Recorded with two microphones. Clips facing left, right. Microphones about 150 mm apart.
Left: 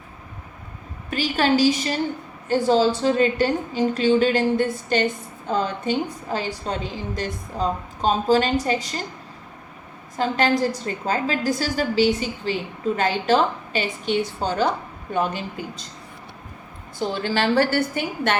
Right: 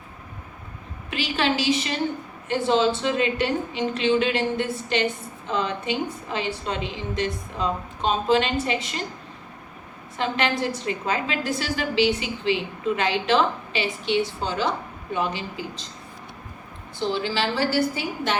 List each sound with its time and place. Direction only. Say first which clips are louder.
1.1 s a woman's voice: left 4 dB; 40° left (ahead or behind)
10.2 s a woman's voice: left 4 dB; 40° left (ahead or behind)
17.0 s a woman's voice: left 2 dB; 50° left (ahead or behind)